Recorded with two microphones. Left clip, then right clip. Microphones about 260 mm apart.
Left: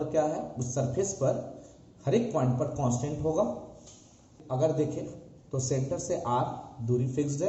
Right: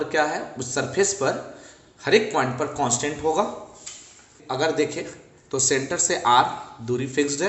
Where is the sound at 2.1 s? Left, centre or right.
Right.